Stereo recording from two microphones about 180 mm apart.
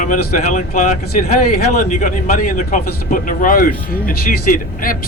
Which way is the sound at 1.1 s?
55° left (ahead or behind).